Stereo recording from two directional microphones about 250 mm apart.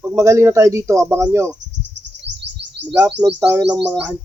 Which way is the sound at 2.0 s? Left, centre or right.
Right.